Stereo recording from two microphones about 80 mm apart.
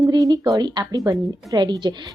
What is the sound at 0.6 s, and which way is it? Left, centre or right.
Speech, right.